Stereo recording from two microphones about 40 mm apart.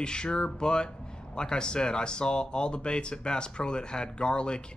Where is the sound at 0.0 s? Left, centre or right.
Left.